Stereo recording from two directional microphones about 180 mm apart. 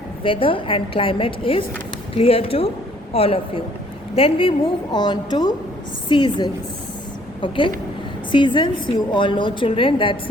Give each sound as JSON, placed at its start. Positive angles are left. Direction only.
{"t": 0.2, "sound": "a woman's voice", "side_deg": 30}